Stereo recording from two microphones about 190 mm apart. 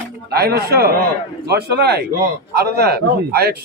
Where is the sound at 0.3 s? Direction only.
55° right (ahead or behind).